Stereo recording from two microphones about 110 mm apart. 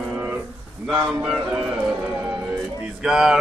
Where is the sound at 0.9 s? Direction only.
5° right (ahead or behind).